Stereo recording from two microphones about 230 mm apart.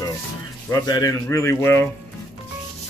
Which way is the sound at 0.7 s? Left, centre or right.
Centre.